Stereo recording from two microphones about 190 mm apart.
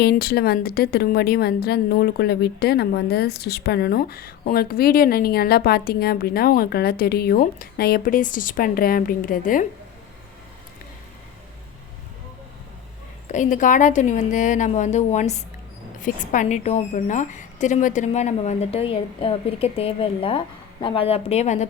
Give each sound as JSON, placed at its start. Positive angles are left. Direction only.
{"t": 0.0, "sound": "a woman's voice", "side_deg": 55}
{"t": 13.2, "sound": "a woman's voice", "side_deg": 40}